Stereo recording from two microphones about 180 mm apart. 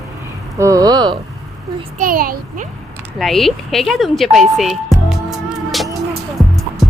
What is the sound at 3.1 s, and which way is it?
Speech, centre (ahead or behind).